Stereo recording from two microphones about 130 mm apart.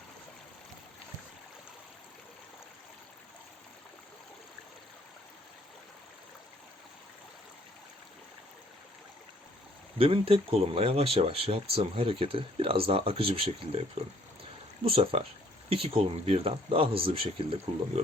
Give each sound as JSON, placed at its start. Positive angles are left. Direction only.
{"t": 10.0, "sound": "speech", "side_deg": -45}
{"t": 14.8, "sound": "speech", "side_deg": -50}